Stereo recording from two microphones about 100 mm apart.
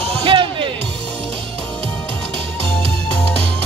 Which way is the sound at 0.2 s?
60° right (ahead or behind).